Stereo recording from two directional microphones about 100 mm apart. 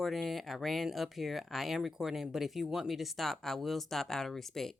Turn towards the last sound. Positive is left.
turn(degrees=5)  # may be behind; listen again after turning